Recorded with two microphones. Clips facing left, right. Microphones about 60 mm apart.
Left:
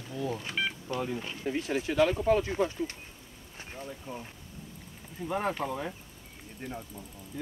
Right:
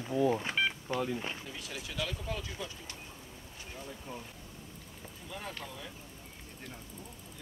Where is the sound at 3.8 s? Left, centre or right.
Centre.